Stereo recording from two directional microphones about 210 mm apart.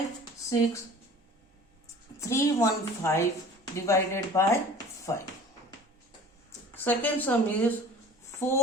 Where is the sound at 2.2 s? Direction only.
15° left (ahead or behind).